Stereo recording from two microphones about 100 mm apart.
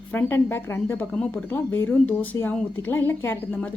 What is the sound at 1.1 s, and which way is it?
Speech, 10° left (ahead or behind).